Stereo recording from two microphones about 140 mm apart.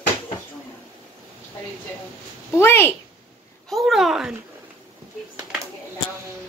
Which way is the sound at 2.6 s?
15° left (ahead or behind).